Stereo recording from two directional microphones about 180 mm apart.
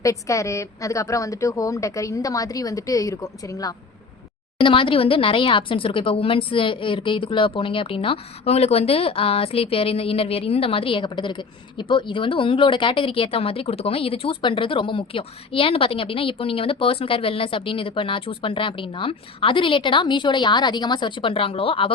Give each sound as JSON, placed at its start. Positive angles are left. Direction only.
{"t": 0.0, "sound": "a woman's voice", "side_deg": 15}